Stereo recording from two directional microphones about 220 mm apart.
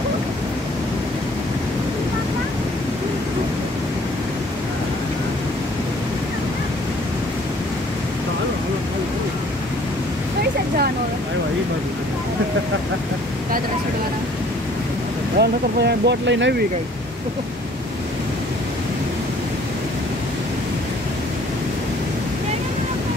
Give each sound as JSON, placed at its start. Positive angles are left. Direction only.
{"t": 15.3, "sound": "speech", "side_deg": -50}